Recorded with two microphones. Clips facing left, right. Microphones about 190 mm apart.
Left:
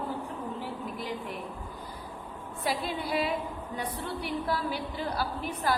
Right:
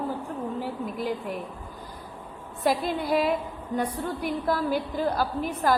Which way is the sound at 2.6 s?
45° right (ahead or behind).